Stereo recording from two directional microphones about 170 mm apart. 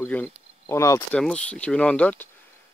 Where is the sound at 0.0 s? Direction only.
10° left (ahead or behind).